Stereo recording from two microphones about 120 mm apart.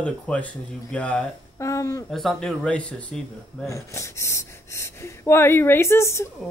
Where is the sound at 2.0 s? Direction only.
Centre (ahead or behind).